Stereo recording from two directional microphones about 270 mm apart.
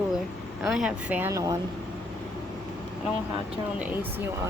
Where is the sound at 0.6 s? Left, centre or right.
Centre.